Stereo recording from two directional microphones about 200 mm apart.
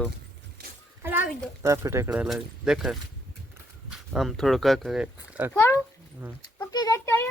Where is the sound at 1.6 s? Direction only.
15° right (ahead or behind).